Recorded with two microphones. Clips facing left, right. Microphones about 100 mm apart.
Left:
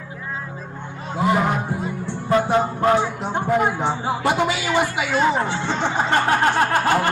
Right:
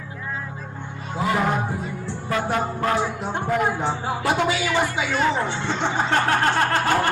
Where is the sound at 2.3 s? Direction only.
25° left (ahead or behind).